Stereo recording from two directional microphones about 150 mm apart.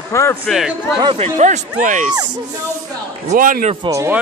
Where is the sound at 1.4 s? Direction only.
55° right (ahead or behind).